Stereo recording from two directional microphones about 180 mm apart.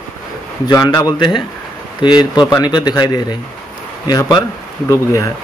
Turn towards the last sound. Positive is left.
turn(degrees=15)  # may be behind; listen again after turning